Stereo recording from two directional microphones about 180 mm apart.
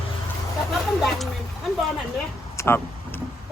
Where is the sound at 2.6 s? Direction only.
10° left (ahead or behind).